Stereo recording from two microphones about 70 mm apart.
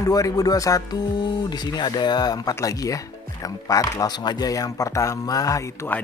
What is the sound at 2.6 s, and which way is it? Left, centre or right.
Speech, left.